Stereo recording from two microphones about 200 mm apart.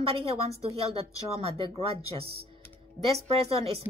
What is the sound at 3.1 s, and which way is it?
Speech, 30° right (ahead or behind).